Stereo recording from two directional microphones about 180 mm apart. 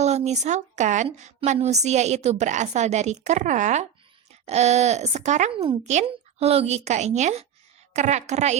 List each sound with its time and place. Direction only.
0.0 s a woman's voice: 40° right (ahead or behind)